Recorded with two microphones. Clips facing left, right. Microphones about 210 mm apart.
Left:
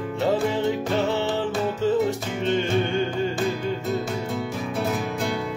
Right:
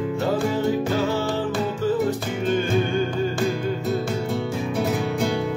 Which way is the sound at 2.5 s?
25° left (ahead or behind).